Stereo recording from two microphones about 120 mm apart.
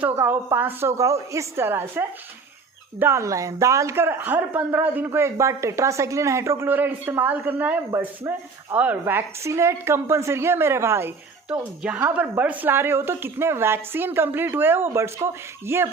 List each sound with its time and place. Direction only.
0.0 s speech: 20° right (ahead or behind)
11.4 s a woman's voice: 10° right (ahead or behind)